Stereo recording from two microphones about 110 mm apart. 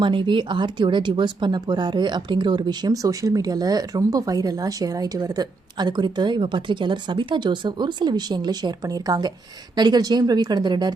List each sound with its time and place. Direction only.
0.0 s speech: 45° right (ahead or behind)